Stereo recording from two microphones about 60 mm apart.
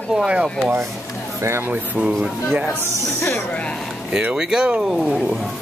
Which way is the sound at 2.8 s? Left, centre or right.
Left.